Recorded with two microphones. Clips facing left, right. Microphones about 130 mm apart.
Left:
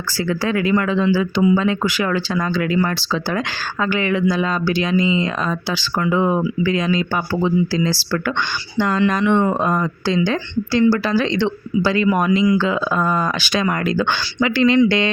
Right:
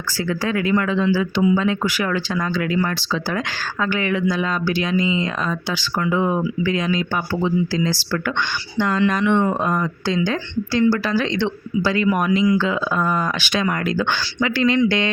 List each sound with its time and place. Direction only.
0.7 s speech: 30° left (ahead or behind)
3.8 s speech: 30° left (ahead or behind)
8.8 s speech: 40° left (ahead or behind)